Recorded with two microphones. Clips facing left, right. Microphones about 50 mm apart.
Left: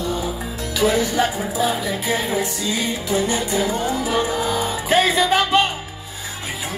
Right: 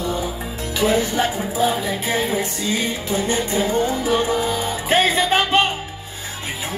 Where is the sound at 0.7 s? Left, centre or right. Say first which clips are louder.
Even; right.